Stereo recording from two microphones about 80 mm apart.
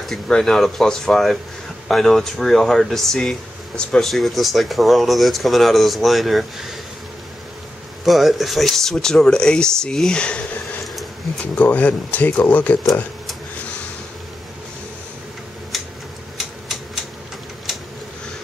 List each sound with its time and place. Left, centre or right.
0.0 s speech: centre
8.0 s speech: centre
15.7 s tick-tock: centre